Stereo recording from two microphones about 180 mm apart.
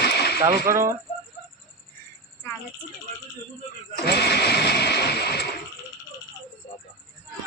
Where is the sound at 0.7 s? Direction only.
15° right (ahead or behind).